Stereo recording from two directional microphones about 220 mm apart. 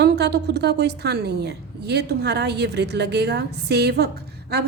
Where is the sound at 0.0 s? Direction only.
50° right (ahead or behind).